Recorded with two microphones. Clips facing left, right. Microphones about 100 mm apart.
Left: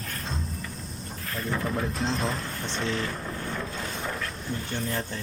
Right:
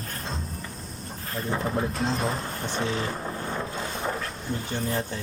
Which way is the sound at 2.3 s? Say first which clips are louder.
Right 2 dB; 30° right (ahead or behind).